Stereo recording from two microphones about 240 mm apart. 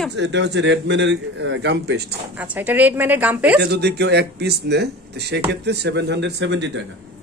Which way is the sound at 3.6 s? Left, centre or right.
Right.